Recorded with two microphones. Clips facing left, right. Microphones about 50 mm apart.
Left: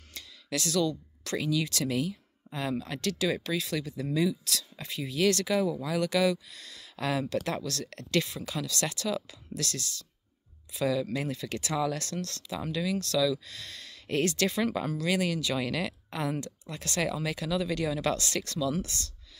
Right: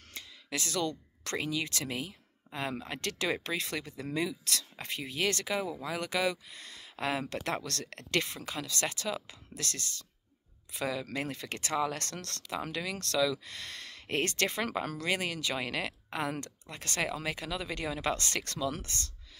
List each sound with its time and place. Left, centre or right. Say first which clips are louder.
0.1 s a sound: left 4 dB; right
0.8 s speech: left 4 dB; right
7.4 s speech: left 2 dB; right